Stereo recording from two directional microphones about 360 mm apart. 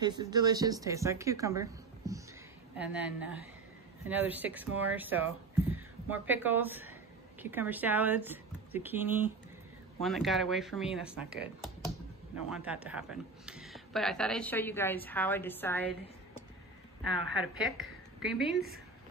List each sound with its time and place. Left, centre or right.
0.0 s a woman's voice: centre
12.4 s speech: centre
17.0 s speech: centre